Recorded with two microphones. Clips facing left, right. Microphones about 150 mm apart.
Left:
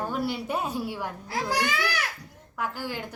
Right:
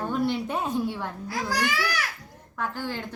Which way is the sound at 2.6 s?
10° left (ahead or behind).